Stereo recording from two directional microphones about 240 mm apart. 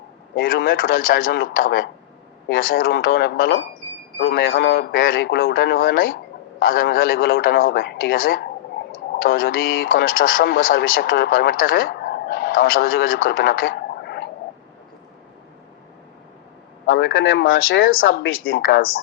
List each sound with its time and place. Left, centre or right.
0.3 s speech: left
13.2 s a sound: left
16.8 s a man's voice: left